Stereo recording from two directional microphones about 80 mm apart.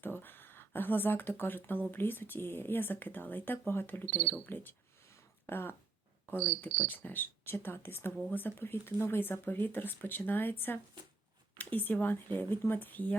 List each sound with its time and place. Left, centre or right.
0.0 s speech: left
11.5 s speech: left